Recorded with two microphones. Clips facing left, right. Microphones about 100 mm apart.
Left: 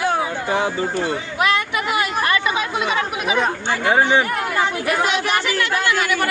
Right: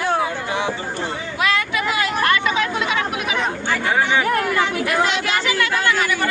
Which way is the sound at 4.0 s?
35° left (ahead or behind).